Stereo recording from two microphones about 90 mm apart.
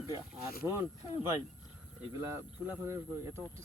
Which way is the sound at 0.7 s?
30° right (ahead or behind).